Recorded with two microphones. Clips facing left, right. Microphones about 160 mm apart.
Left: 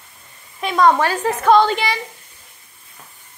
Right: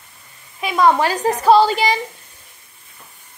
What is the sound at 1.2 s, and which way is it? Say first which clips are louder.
Speech: right 1 dB; 35° right (ahead or behind).